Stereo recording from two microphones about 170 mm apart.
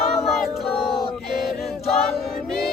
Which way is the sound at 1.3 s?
60° left (ahead or behind).